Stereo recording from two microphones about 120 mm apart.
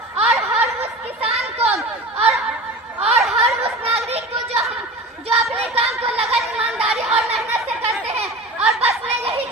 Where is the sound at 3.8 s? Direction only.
55° right (ahead or behind).